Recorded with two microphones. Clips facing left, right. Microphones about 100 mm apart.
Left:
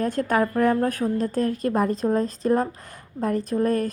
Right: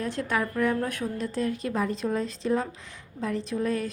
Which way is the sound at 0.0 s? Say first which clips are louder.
Left 6 dB; 45° left (ahead or behind).